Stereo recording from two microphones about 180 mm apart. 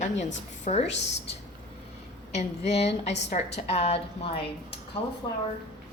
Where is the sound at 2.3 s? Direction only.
35° left (ahead or behind).